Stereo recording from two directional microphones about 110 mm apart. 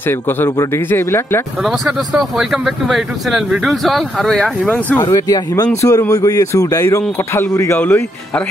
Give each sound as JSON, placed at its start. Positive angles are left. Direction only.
{"t": 0.0, "sound": "speech", "side_deg": 20}
{"t": 1.6, "sound": "speech", "side_deg": 0}
{"t": 4.6, "sound": "speech", "side_deg": 15}
{"t": 5.0, "sound": "speech", "side_deg": 30}